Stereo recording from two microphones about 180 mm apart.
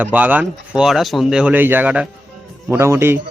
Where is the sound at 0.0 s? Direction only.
10° right (ahead or behind).